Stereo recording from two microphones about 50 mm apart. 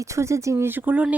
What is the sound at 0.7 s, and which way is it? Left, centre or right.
Speech, right.